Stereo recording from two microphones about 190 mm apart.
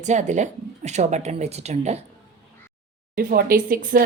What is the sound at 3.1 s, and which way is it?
Speech, 50° right (ahead or behind).